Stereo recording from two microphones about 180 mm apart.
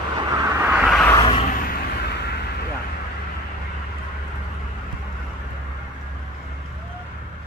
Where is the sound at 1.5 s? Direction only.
55° left (ahead or behind).